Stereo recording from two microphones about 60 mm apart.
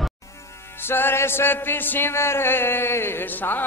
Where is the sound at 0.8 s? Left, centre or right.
Left.